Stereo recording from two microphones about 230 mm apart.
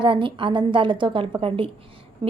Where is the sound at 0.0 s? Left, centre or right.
Right.